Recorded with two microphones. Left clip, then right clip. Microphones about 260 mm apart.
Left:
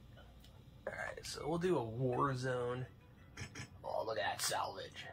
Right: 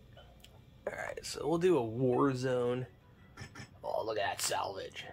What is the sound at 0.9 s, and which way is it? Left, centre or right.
Speech, right.